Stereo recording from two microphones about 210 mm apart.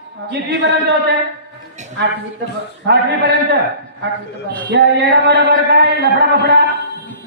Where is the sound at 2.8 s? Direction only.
55° right (ahead or behind).